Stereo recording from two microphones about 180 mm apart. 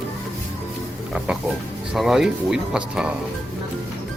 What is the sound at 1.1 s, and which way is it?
Pig, centre (ahead or behind).